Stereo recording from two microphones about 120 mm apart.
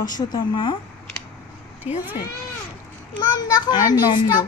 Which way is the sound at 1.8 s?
10° right (ahead or behind).